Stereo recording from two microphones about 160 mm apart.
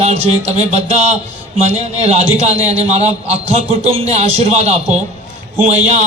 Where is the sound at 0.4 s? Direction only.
45° right (ahead or behind).